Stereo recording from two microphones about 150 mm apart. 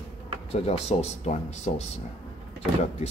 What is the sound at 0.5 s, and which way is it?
Speech, 45° left (ahead or behind).